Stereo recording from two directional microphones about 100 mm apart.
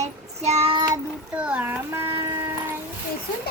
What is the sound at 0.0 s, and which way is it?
Child singing, 90° right.